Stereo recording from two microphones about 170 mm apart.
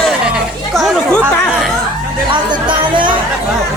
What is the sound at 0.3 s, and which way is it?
Chatter, centre (ahead or behind).